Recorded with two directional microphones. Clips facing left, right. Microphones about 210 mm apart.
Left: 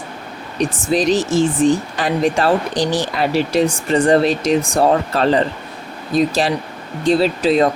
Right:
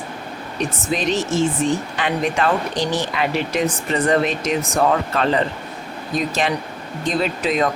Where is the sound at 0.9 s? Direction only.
35° left (ahead or behind).